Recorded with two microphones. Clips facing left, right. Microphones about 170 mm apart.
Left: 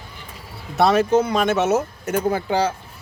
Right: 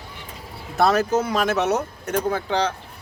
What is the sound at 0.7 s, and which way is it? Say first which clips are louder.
Speech: left 3 dB; centre (ahead or behind).